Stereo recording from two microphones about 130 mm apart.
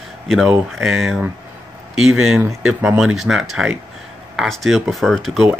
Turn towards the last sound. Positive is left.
turn(degrees=0)  # may be behind; listen again after turning